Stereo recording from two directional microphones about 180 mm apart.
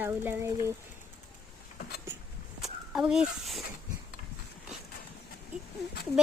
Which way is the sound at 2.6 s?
5° right (ahead or behind).